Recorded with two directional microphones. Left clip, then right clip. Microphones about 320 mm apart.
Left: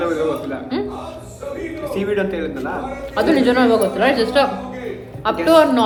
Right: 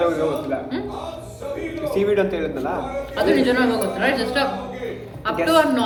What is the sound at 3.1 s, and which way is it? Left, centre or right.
Speech, centre.